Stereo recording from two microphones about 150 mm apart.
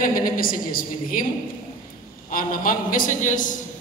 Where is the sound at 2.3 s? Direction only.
70° left (ahead or behind).